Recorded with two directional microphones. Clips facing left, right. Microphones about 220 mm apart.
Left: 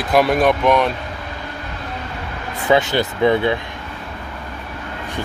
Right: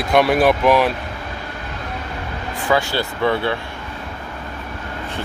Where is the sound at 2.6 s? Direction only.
20° left (ahead or behind).